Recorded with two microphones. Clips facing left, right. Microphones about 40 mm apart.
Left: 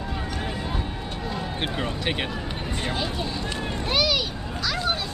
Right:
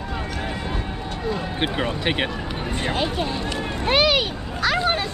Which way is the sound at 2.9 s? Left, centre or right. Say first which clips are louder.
Right 6 dB; right.